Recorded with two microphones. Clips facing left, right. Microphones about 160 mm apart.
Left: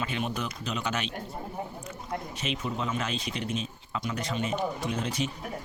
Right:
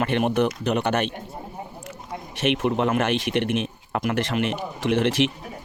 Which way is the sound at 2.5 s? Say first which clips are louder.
Right 10 dB; 70° right (ahead or behind).